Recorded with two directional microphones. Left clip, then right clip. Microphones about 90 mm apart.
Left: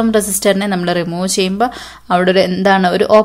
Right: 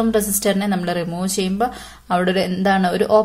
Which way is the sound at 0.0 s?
40° left (ahead or behind).